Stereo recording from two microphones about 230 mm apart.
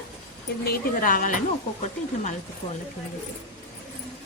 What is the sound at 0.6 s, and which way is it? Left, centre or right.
Speech, left.